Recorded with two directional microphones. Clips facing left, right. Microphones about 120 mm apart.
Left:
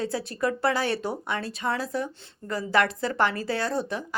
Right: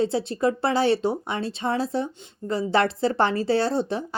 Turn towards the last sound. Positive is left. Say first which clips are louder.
# right 4 dB
turn(degrees=-30)  # may be behind; listen again after turning